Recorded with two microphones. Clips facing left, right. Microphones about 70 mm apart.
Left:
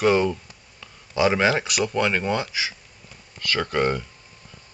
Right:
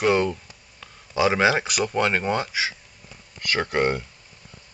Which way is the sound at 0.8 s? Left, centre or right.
Centre.